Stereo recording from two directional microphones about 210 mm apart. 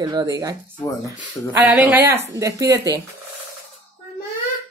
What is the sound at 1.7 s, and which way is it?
Speech, 10° right (ahead or behind).